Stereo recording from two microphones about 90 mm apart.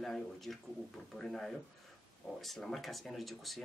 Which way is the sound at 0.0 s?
Centre (ahead or behind).